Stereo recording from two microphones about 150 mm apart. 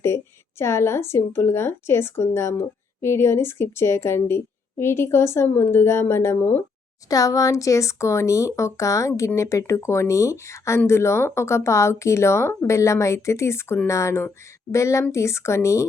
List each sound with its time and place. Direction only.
0.6 s a woman's voice: 20° left (ahead or behind)